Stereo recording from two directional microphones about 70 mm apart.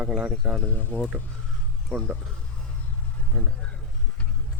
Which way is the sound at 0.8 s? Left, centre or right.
Left.